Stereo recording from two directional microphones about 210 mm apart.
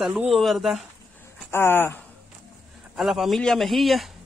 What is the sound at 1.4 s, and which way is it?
Speech, 10° left (ahead or behind).